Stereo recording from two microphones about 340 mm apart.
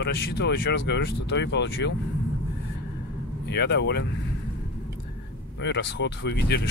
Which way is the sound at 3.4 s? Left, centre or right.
Left.